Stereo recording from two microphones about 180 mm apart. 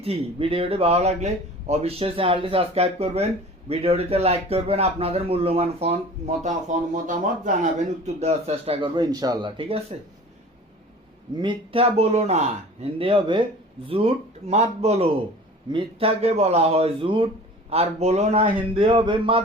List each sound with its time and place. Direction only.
0.0 s a man's voice: 30° right (ahead or behind)
11.3 s a man's voice: 30° right (ahead or behind)